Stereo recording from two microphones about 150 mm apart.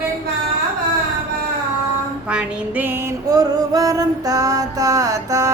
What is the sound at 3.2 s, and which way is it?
Music, 25° right (ahead or behind).